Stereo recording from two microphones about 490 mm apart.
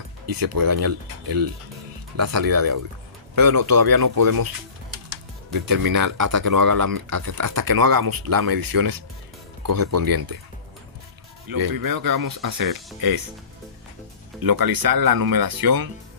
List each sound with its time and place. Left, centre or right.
0.3 s speech: right
5.5 s speech: right
11.4 s speech: right
14.4 s speech: right